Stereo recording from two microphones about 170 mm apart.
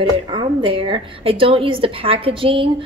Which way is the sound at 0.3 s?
30° right (ahead or behind).